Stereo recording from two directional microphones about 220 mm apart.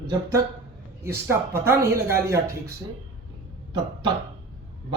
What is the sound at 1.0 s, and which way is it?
Speech, 10° right (ahead or behind).